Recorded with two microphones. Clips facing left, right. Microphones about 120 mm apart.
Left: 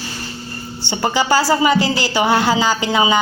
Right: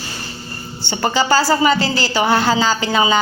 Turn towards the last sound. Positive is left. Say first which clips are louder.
# even
turn(degrees=20)  # may be behind; listen again after turning